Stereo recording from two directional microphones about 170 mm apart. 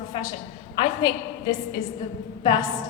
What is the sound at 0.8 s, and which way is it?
A woman's voice, 25° left (ahead or behind).